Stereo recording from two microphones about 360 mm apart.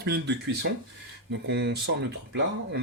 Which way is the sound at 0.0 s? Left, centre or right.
Right.